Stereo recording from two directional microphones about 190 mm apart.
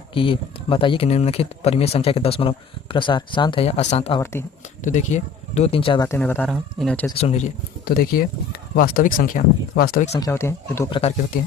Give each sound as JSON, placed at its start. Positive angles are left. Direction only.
{"t": 0.1, "sound": "speech", "side_deg": 25}
{"t": 4.2, "sound": "speech", "side_deg": 15}
{"t": 4.8, "sound": "speech", "side_deg": 40}
{"t": 6.1, "sound": "speech", "side_deg": 10}
{"t": 7.2, "sound": "speech", "side_deg": 35}
{"t": 7.9, "sound": "speech", "side_deg": 50}
{"t": 10.2, "sound": "speech", "side_deg": 15}